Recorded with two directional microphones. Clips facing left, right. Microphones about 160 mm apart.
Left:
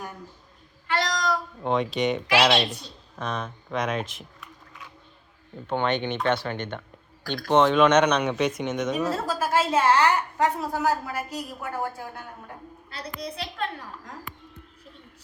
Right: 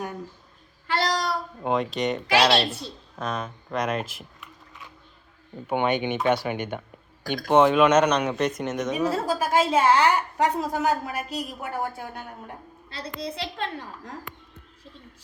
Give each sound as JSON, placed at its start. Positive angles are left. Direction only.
{"t": 0.9, "sound": "a sound", "side_deg": -30}
{"t": 1.6, "sound": "speech", "side_deg": 0}
{"t": 5.6, "sound": "speech", "side_deg": -10}
{"t": 12.9, "sound": "a woman's voice", "side_deg": -25}